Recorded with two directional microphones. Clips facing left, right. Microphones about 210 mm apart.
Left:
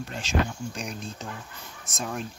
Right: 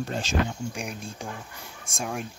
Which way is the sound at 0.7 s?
10° right (ahead or behind).